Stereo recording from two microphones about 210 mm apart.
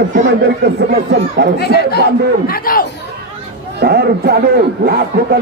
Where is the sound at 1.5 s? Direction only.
50° left (ahead or behind).